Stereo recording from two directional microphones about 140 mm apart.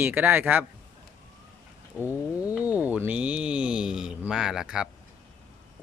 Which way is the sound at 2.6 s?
10° right (ahead or behind).